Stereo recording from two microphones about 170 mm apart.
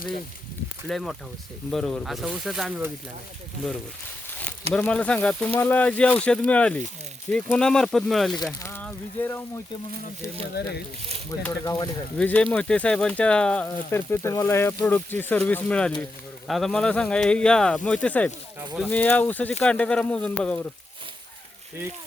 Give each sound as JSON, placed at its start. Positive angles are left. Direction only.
{"t": 0.9, "sound": "speech", "side_deg": 0}
{"t": 4.7, "sound": "speech", "side_deg": 5}
{"t": 8.6, "sound": "a sound", "side_deg": 10}
{"t": 10.6, "sound": "speech", "side_deg": 75}
{"t": 11.6, "sound": "speech", "side_deg": 20}
{"t": 12.1, "sound": "speech", "side_deg": 5}